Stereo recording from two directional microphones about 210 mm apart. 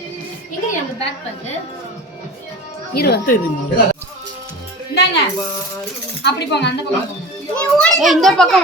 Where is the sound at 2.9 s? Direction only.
50° left (ahead or behind).